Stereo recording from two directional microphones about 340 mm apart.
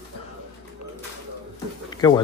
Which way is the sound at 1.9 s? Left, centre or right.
Centre.